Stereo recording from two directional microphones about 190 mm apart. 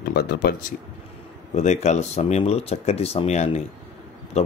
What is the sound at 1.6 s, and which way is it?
Speech, 35° left (ahead or behind).